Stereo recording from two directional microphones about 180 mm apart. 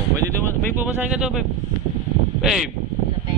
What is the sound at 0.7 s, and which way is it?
Speech, 10° right (ahead or behind).